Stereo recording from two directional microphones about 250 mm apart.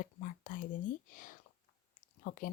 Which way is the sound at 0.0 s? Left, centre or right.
Left.